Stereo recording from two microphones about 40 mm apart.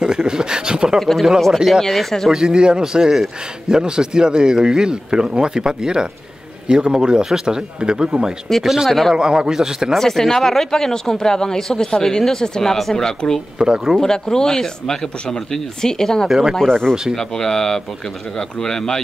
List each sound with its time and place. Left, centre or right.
0.0 s a sound: centre
0.9 s speech: centre
1.5 s a man's voice: centre
1.8 s speech: centre
2.3 s a man's voice: centre
8.6 s a man's voice: centre
9.1 s a man's voice: centre
9.9 s speech: centre
13.6 s a man's voice: centre
14.0 s speech: centre
16.3 s a man's voice: centre
16.5 s speech: centre